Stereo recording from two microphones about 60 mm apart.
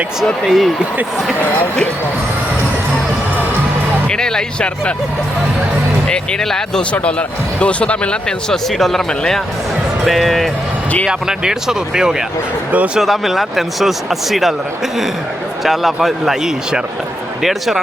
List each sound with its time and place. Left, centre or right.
0.4 s speech: centre
1.4 s speech: left
4.1 s speech: centre
6.1 s speech: centre
6.9 s speech: left
8.8 s speech: centre
11.1 s speech: centre
12.7 s speech: right
13.0 s speech: centre
15.6 s speech: centre